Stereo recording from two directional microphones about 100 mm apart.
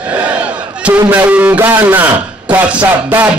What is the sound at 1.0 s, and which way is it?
A man's voice, 15° right (ahead or behind).